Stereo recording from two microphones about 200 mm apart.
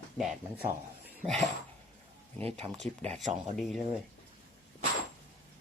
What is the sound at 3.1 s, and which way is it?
Speech, 5° left (ahead or behind).